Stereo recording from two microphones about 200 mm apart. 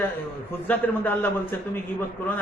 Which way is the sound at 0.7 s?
10° left (ahead or behind).